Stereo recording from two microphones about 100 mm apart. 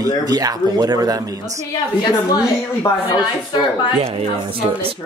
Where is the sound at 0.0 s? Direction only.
40° right (ahead or behind).